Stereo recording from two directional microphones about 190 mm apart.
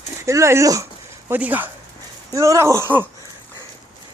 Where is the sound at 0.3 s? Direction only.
15° right (ahead or behind).